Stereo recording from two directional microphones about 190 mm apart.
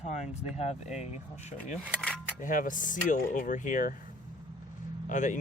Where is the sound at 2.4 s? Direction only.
45° left (ahead or behind).